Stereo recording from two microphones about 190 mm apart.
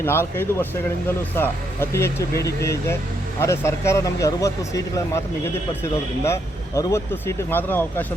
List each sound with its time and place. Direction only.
0.0 s speech: 10° left (ahead or behind)
6.2 s speech: 15° left (ahead or behind)